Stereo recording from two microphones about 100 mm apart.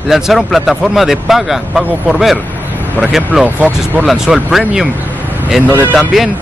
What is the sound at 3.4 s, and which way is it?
Speech, 15° right (ahead or behind).